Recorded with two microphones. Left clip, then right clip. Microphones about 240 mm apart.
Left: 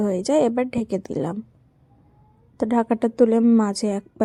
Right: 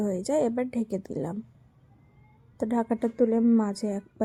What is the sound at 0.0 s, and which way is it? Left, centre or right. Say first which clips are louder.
A woman's voice: left 7 dB; left.